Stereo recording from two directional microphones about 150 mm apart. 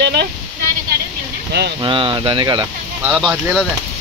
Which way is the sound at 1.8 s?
35° right (ahead or behind).